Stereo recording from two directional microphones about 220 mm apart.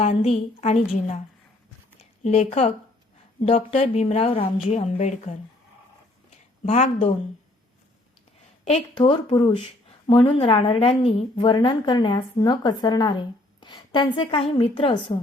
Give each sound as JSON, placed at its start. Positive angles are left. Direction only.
{"t": 0.0, "sound": "a woman's voice", "side_deg": 30}
{"t": 2.2, "sound": "a woman's voice", "side_deg": 30}
{"t": 6.7, "sound": "a woman's voice", "side_deg": 30}
{"t": 8.6, "sound": "a woman's voice", "side_deg": 25}